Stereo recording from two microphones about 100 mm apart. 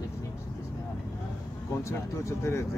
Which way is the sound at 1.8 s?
30° left (ahead or behind).